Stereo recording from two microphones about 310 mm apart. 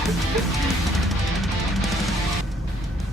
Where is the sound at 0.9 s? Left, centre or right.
Centre.